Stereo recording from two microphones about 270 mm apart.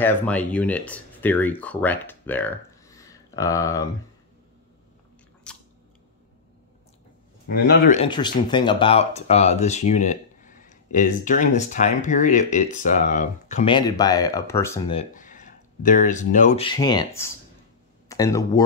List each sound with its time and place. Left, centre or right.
0.0 s speech: centre
5.5 s biting: centre
7.4 s speech: left
8.0 s speech: centre
15.0 s speech: left; by 18.6 s centre